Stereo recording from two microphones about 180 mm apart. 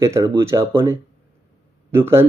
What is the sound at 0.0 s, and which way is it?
Speech, 15° right (ahead or behind).